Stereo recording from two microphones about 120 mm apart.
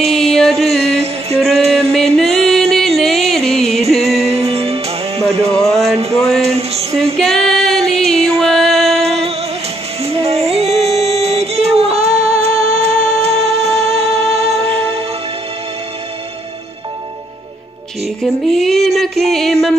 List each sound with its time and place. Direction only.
0.0 s music: 5° left (ahead or behind)
0.8 s music: 60° right (ahead or behind)
1.7 s music: 5° left (ahead or behind)
4.2 s music: 60° right (ahead or behind)
5.5 s speech: 5° left (ahead or behind)
6.4 s a sound: 60° right (ahead or behind)
7.2 s female singing: 5° left (ahead or behind)
8.4 s music: centre (ahead or behind)
9.0 s music: 55° right (ahead or behind)
18.2 s a sound: centre (ahead or behind)